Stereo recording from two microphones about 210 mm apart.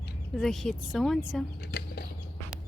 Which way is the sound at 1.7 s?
50° left (ahead or behind).